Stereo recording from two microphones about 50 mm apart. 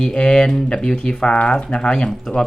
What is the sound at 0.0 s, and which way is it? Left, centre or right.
Speech, centre.